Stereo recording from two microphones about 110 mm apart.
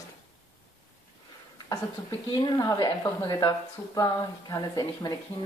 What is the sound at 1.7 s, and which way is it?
Speech, 35° left (ahead or behind).